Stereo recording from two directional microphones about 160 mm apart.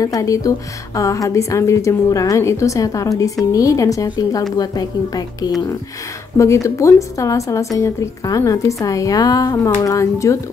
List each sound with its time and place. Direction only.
0.0 s a woman's voice: 20° left (ahead or behind)